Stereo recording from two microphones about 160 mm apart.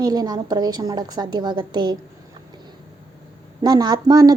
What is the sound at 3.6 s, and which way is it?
Speech, 25° right (ahead or behind).